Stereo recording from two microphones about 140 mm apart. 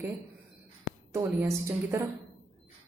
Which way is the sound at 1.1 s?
20° right (ahead or behind).